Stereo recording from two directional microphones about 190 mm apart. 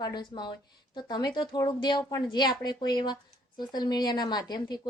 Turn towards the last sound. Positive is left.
turn(degrees=20)  # may be behind; listen again after turning